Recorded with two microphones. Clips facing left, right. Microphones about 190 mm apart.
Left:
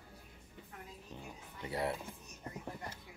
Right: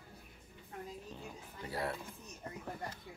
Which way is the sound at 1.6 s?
25° left (ahead or behind).